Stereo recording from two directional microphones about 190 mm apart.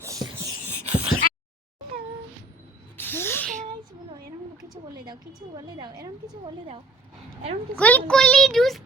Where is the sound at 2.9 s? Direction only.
10° left (ahead or behind).